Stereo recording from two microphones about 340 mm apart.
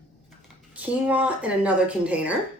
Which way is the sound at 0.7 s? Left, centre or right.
Centre.